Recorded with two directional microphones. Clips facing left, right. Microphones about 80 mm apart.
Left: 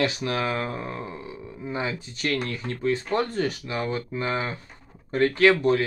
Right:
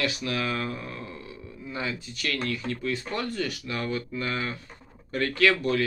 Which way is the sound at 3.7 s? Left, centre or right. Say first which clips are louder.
Left 2 dB; left.